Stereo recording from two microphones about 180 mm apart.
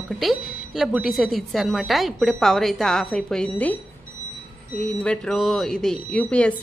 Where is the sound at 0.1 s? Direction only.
Centre (ahead or behind).